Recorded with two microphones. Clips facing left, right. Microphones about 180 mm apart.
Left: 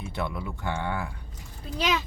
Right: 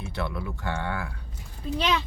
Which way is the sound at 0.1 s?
15° left (ahead or behind).